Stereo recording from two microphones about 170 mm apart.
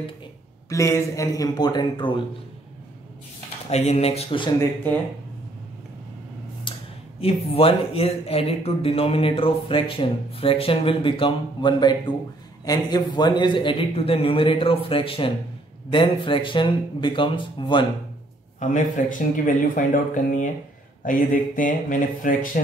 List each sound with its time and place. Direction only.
0.7 s speech: 20° left (ahead or behind)
3.7 s speech: 40° left (ahead or behind)
4.6 s speech: 10° left (ahead or behind)
6.7 s a sound: 30° left (ahead or behind)
7.2 s speech: 35° left (ahead or behind)
18.6 s speech: 50° left (ahead or behind)